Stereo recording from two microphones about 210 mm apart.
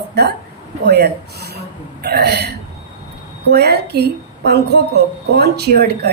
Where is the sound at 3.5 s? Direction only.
50° right (ahead or behind).